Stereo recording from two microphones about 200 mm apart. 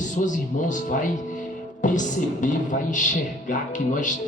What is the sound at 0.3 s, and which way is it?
Speech, 40° left (ahead or behind).